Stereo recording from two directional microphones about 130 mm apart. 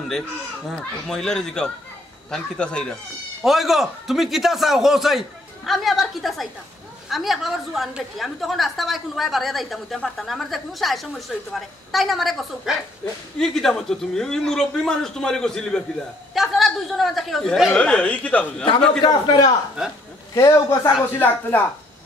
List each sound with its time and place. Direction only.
0.7 s a woman's voice: 5° left (ahead or behind)
19.0 s a man's voice: 30° left (ahead or behind); by 21.6 s 15° left (ahead or behind)